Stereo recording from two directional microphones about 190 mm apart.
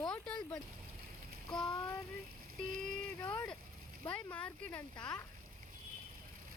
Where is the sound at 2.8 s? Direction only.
10° left (ahead or behind).